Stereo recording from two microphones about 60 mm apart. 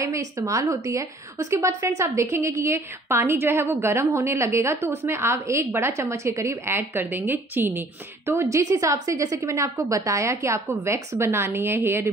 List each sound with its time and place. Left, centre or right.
0.0 s a woman's voice: right
8.3 s a woman's voice: right